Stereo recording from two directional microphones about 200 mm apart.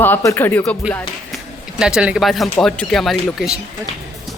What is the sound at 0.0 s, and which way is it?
Speech, 10° left (ahead or behind).